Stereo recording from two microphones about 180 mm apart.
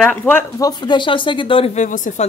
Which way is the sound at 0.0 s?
10° left (ahead or behind).